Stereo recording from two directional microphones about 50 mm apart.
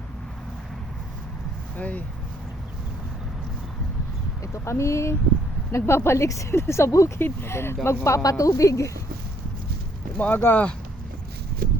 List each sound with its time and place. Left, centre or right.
1.7 s speech: left
4.5 s speech: left
5.7 s speech: left
6.6 s speech: left
7.2 s speech: left
7.9 s speech: left
10.2 s speech: left